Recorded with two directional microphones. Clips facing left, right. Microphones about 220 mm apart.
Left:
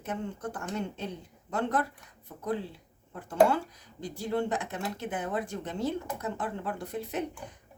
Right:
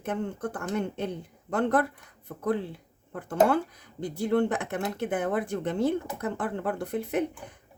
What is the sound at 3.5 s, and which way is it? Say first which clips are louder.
Speech: right 4 dB; 55° right (ahead or behind).